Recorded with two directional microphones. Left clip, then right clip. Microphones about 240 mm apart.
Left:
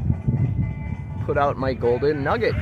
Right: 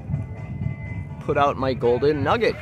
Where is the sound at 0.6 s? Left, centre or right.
Left.